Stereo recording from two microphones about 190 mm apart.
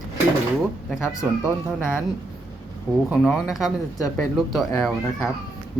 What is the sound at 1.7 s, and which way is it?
Speech, 10° left (ahead or behind).